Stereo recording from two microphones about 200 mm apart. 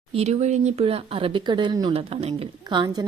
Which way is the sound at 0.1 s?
30° right (ahead or behind).